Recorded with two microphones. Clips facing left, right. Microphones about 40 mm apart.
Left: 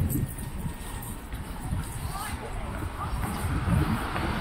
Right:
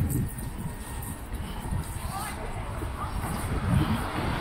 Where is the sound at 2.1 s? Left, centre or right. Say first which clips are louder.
Right 1 dB; centre.